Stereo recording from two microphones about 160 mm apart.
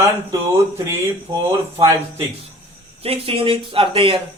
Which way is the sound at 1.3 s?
25° right (ahead or behind).